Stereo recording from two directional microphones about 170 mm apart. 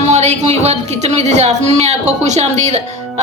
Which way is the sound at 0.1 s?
40° right (ahead or behind).